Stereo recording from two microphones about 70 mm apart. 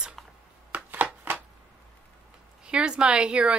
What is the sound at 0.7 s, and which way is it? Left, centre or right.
Chopping, right.